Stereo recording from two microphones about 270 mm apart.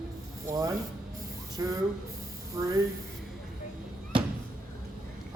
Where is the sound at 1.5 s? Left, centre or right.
Centre.